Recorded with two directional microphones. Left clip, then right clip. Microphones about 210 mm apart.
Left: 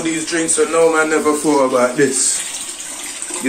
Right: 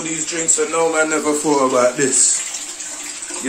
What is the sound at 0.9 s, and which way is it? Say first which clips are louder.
Speech: left 3 dB; 15° right (ahead or behind).